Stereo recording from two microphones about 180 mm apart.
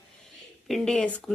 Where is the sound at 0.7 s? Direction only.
5° left (ahead or behind).